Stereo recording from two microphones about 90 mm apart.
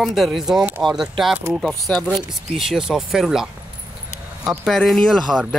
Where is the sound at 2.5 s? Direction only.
5° right (ahead or behind).